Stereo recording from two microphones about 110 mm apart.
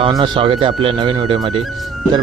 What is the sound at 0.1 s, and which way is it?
A man's voice, 50° right (ahead or behind).